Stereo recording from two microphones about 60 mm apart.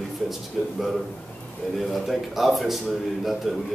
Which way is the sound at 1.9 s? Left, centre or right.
Centre.